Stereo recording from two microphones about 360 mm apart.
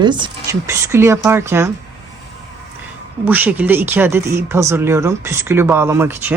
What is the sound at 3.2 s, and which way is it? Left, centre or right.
Speech, centre.